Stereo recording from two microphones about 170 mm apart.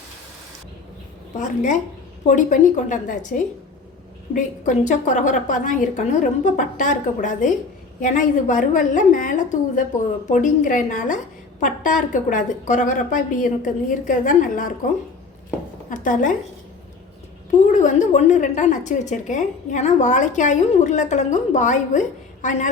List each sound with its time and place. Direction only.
1.4 s a woman's voice: 45° left (ahead or behind)
15.9 s a woman's voice: 50° left (ahead or behind)
17.7 s a woman's voice: 45° left (ahead or behind)